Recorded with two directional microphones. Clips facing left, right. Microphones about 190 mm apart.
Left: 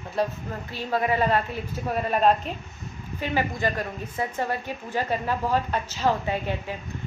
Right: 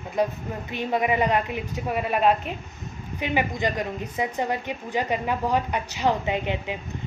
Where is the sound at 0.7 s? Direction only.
20° right (ahead or behind).